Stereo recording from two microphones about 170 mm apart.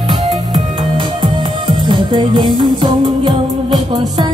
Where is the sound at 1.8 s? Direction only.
25° right (ahead or behind).